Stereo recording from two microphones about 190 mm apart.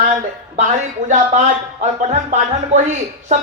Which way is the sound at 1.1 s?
40° right (ahead or behind).